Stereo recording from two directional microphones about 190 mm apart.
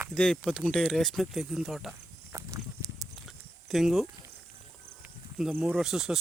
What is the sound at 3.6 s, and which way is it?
Speech, centre (ahead or behind).